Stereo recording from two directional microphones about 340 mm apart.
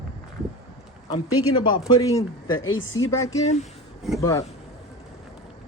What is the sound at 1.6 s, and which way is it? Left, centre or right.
Speech, centre.